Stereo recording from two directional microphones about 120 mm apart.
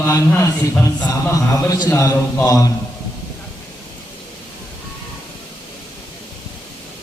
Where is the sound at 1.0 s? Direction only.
30° left (ahead or behind).